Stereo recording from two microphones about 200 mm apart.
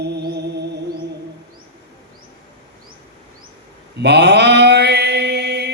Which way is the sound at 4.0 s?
60° right (ahead or behind).